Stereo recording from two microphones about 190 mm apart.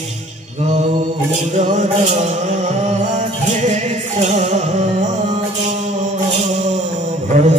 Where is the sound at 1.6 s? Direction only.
40° right (ahead or behind).